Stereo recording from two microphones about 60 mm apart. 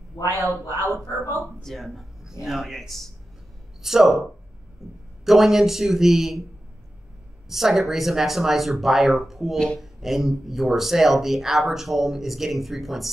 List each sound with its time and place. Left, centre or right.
0.3 s a man's voice: right
1.6 s speech: centre
4.8 s a sound: centre
5.2 s speech: centre
7.4 s speech: centre